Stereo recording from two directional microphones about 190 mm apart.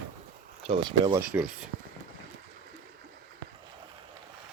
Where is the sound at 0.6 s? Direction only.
25° right (ahead or behind).